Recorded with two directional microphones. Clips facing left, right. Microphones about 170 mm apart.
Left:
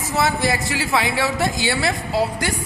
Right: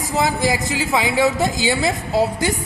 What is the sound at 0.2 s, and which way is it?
A woman's voice, 15° right (ahead or behind).